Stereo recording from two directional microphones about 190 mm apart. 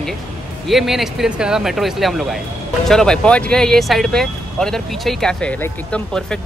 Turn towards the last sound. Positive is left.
turn(degrees=5)  # may be behind; listen again after turning